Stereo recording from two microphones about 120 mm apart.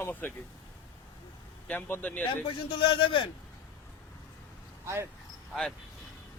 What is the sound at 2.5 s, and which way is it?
Speech, 45° left (ahead or behind).